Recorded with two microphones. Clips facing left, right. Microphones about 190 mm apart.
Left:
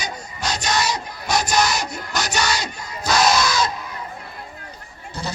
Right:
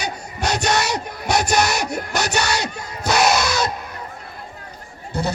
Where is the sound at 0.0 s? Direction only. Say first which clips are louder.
Right 4 dB; 60° right (ahead or behind).